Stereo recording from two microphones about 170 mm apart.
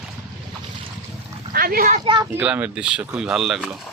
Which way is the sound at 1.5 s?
60° right (ahead or behind).